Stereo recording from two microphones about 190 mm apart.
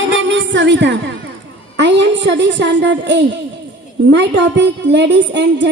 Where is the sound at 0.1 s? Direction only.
70° right (ahead or behind).